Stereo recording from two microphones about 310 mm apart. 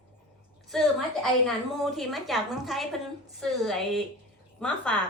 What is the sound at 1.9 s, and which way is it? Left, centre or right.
A woman's voice, centre.